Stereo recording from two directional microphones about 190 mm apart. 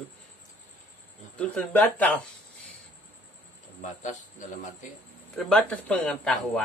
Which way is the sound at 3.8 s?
40° left (ahead or behind).